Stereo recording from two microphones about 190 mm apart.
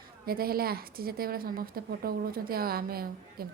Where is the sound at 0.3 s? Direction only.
50° right (ahead or behind).